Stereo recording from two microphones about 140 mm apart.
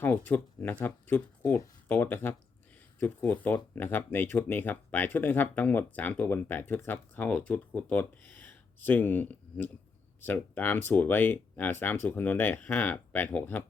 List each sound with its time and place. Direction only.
0.0 s speech: 15° left (ahead or behind)